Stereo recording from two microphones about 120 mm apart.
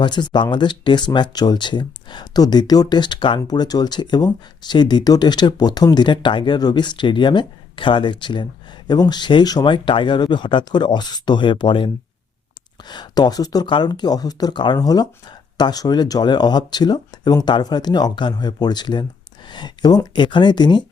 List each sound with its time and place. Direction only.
0.0 s speech: 40° left (ahead or behind)